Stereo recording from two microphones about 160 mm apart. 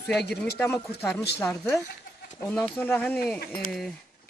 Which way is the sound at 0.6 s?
15° left (ahead or behind).